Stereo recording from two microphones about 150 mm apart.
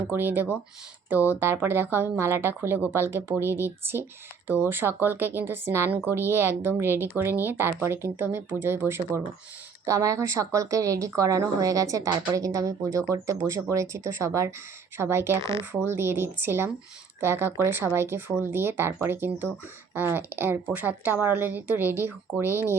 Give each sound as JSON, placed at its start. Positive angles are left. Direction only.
{"t": 0.1, "sound": "speech", "side_deg": -15}